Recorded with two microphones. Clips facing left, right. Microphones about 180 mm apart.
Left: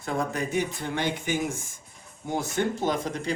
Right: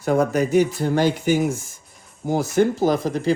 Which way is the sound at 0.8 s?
40° right (ahead or behind).